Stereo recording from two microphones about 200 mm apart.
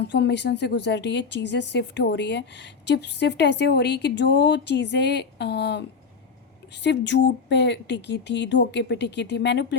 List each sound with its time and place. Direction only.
0.1 s speech: 60° left (ahead or behind)
6.8 s speech: 60° left (ahead or behind)